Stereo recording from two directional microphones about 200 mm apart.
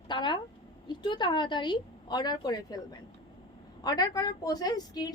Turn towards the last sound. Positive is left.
turn(degrees=20)  # may be behind; listen again after turning